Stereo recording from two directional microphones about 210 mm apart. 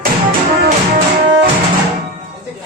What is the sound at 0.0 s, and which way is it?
Music, 45° right (ahead or behind).